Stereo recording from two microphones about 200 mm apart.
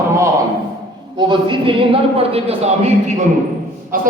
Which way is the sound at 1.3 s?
25° right (ahead or behind).